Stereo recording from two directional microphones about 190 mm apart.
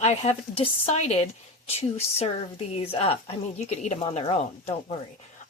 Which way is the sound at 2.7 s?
30° left (ahead or behind).